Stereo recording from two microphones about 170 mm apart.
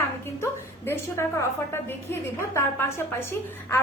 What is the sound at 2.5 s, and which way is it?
A woman's voice, 15° left (ahead or behind).